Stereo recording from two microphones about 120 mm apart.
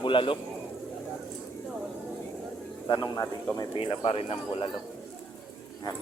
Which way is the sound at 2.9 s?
35° left (ahead or behind).